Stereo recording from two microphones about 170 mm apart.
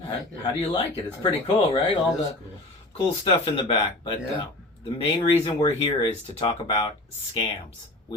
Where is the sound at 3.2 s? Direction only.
30° left (ahead or behind).